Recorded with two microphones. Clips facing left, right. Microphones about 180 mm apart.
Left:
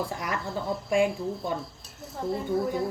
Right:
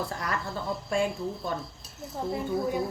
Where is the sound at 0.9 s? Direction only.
15° left (ahead or behind).